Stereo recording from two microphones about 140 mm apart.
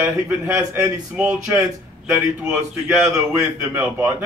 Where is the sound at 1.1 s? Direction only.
10° right (ahead or behind).